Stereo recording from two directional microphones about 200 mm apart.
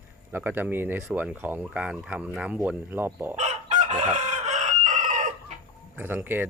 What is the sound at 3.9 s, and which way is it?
Chicken, 35° right (ahead or behind).